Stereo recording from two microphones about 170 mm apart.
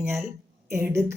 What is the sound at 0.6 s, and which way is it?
Speech, 15° right (ahead or behind).